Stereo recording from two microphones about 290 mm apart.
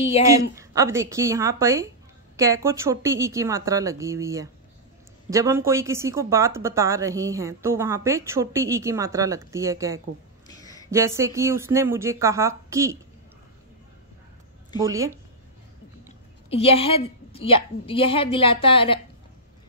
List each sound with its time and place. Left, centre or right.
0.3 s speech: centre
10.5 s a sound: centre
10.9 s speech: centre
14.8 s speech: centre
16.4 s a woman's voice: centre